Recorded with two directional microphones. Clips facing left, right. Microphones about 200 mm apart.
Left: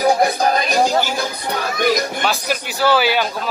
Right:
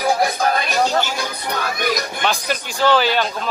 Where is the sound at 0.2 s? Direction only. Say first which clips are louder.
Left 2 dB; 35° left (ahead or behind).